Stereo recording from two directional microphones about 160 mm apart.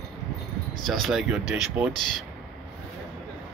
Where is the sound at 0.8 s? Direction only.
Centre (ahead or behind).